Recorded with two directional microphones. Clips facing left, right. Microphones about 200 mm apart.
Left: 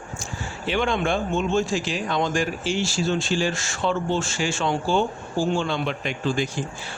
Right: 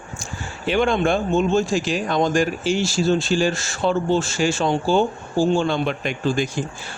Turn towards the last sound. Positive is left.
turn(degrees=-45)  # may be behind; listen again after turning